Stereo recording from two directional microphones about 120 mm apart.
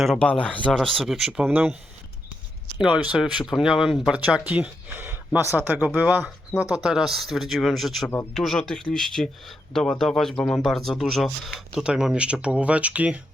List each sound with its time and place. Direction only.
0.0 s speech: centre (ahead or behind)
0.3 s speech: 10° left (ahead or behind); by 1.5 s 5° right (ahead or behind)
1.5 s speech: 15° right (ahead or behind)
2.7 s speech: 10° right (ahead or behind)